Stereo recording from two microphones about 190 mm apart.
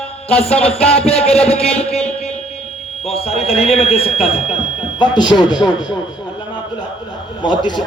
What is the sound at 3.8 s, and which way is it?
A man's voice, 30° left (ahead or behind).